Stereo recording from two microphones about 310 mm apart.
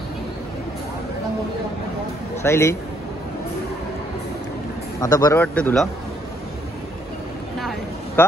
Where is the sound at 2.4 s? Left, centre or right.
Centre.